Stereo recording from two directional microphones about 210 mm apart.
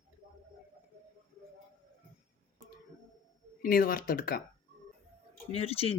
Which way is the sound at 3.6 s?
45° left (ahead or behind).